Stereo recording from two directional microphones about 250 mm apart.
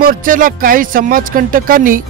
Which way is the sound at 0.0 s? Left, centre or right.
Right.